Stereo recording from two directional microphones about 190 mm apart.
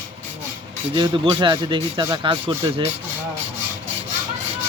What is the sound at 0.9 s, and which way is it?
Speech, 25° right (ahead or behind).